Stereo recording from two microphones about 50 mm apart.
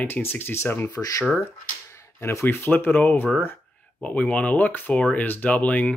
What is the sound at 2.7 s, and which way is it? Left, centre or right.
Speech, left.